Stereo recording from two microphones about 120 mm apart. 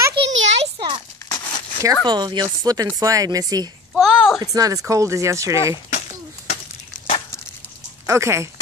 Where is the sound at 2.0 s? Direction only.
35° right (ahead or behind).